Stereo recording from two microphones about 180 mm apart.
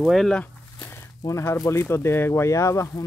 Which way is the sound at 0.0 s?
Centre (ahead or behind).